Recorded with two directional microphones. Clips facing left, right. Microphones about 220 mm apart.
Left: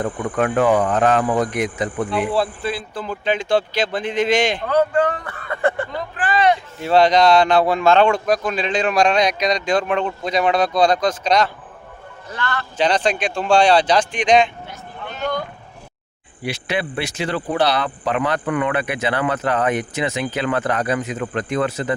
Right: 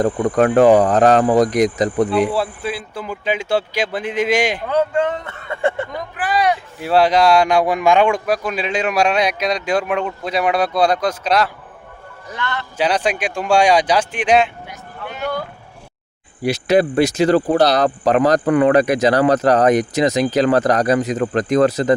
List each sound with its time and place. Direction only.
0.0 s speech: 40° right (ahead or behind)
2.3 s speech: 10° right (ahead or behind)
4.7 s speech: 25° right (ahead or behind); by 11.5 s 5° right (ahead or behind)
12.3 s a man's voice: 20° right (ahead or behind)
12.7 s speech: 10° right (ahead or behind)
16.4 s speech: 40° right (ahead or behind)